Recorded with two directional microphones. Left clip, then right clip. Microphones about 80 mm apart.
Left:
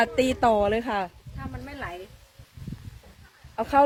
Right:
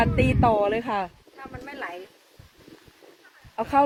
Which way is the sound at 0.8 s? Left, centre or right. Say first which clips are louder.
Right 1 dB; centre.